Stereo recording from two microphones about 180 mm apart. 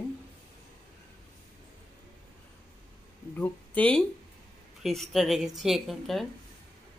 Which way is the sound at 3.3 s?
10° left (ahead or behind).